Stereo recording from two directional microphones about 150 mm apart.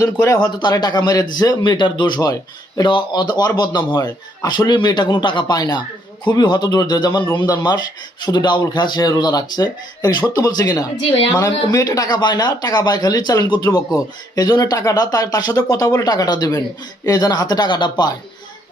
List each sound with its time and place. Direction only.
0.0 s a man's voice: 20° left (ahead or behind)